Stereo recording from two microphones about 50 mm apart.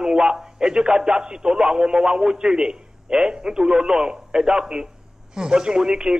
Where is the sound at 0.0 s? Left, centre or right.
Centre.